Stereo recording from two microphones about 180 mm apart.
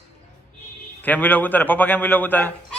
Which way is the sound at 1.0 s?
10° left (ahead or behind).